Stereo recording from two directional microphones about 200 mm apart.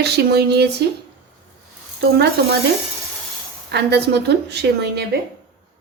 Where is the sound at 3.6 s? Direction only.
55° right (ahead or behind).